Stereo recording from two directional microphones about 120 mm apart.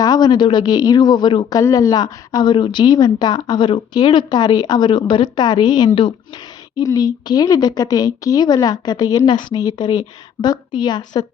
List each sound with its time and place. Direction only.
0.0 s a woman's voice: 35° left (ahead or behind)
1.5 s a woman's voice: 30° left (ahead or behind)
5.9 s speech: 50° left (ahead or behind)
6.8 s a woman's voice: 30° left (ahead or behind)